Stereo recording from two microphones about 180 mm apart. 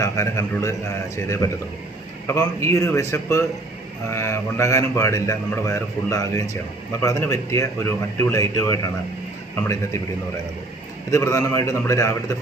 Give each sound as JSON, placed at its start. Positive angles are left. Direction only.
{"t": 0.0, "sound": "a man's voice", "side_deg": 15}
{"t": 11.1, "sound": "a man's voice", "side_deg": 15}